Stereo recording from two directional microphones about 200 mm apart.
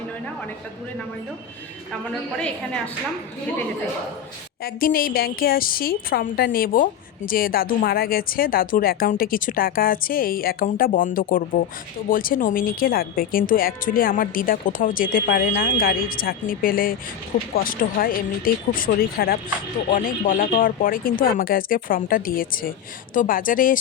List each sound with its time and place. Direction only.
2.4 s a woman's voice: 5° left (ahead or behind)
4.6 s a woman's voice: 45° left (ahead or behind)